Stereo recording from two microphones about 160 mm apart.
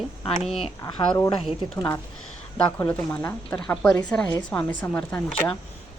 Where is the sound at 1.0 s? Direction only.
20° left (ahead or behind).